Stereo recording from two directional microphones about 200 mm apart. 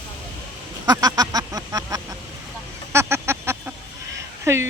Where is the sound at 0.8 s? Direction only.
20° right (ahead or behind).